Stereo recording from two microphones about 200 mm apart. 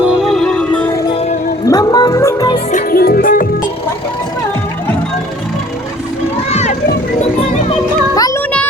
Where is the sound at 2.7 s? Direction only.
45° left (ahead or behind).